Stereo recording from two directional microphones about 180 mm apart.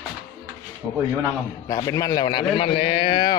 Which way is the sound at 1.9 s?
20° left (ahead or behind).